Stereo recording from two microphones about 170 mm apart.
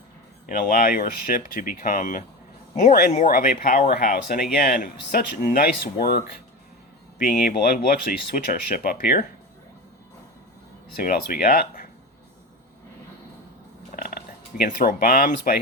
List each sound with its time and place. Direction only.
0.4 s speech: 55° left (ahead or behind)
10.9 s speech: 60° left (ahead or behind)
13.9 s a sound: 55° left (ahead or behind)